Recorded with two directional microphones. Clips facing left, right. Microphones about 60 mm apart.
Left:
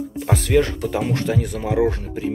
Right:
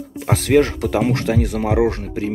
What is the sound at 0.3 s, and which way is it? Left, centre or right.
Speech, right.